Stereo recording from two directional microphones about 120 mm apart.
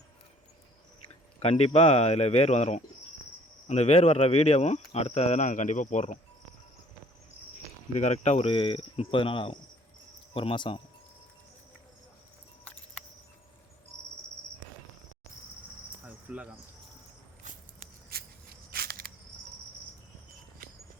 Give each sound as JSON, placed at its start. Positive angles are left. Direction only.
{"t": 1.4, "sound": "speech", "side_deg": 55}
{"t": 7.9, "sound": "speech", "side_deg": 75}
{"t": 8.4, "sound": "speech", "side_deg": 50}
{"t": 12.6, "sound": "cricket", "side_deg": 10}
{"t": 16.0, "sound": "cricket", "side_deg": -10}